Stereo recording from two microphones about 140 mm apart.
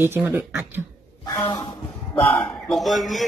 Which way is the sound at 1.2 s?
25° left (ahead or behind).